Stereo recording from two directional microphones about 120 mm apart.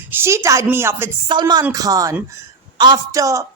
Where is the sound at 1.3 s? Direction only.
35° right (ahead or behind).